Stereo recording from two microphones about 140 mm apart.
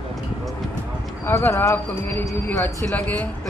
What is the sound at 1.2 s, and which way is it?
Speech, 15° left (ahead or behind).